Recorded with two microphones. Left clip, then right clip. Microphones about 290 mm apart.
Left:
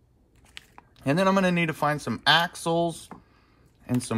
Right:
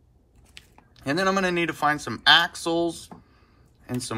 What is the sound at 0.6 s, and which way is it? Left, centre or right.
Speech, left.